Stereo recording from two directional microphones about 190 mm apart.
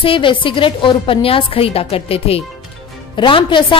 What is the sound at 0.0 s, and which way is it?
A woman's voice, 25° left (ahead or behind).